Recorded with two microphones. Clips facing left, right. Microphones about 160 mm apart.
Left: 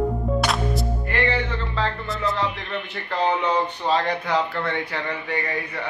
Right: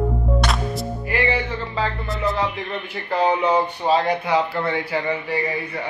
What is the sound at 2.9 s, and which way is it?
Speech, 10° right (ahead or behind).